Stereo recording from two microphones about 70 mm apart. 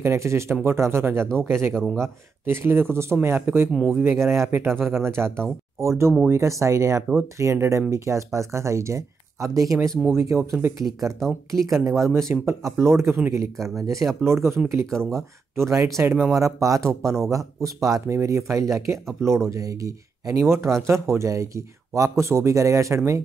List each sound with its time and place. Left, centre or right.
0.0 s speech: right
3.7 s speech: centre
4.0 s speech: right
11.1 s speech: centre
12.0 s speech: right
14.9 s speech: centre
15.1 s speech: right